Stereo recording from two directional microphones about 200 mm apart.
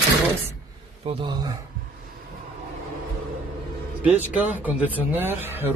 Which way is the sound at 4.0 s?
10° right (ahead or behind).